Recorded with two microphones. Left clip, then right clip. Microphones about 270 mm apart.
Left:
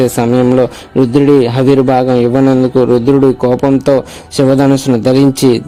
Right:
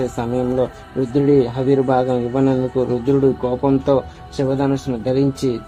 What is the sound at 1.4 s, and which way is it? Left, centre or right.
Speech, left.